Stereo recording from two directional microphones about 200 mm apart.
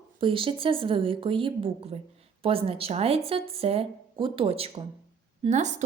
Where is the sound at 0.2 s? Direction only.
25° right (ahead or behind).